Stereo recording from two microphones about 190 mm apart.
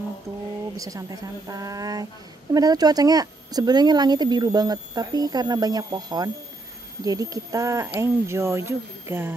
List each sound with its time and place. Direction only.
0.7 s speech: 15° right (ahead or behind)